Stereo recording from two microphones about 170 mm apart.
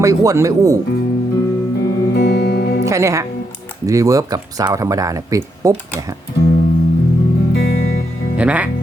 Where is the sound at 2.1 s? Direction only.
70° left (ahead or behind).